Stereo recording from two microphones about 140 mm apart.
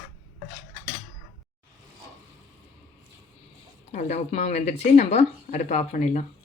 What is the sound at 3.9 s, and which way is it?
Speech, 55° left (ahead or behind).